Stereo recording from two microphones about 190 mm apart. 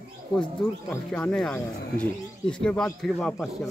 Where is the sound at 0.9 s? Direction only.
5° left (ahead or behind).